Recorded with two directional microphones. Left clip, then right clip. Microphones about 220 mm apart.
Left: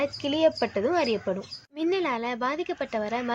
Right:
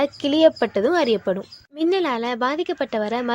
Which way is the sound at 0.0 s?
35° right (ahead or behind).